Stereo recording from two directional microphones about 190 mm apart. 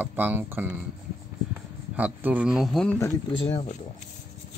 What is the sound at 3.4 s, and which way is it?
Speech, 30° left (ahead or behind).